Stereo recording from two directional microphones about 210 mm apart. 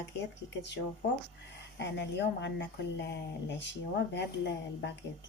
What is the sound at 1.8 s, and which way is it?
Speech, 55° left (ahead or behind).